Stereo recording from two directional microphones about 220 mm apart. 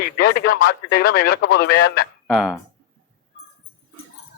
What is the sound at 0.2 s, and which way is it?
Speech, 45° left (ahead or behind).